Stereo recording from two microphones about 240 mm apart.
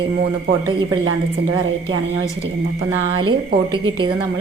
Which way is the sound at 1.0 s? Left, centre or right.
Right.